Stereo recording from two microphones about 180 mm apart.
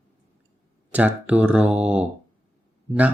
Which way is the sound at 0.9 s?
10° right (ahead or behind).